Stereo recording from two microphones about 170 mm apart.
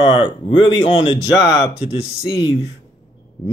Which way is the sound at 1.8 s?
35° left (ahead or behind).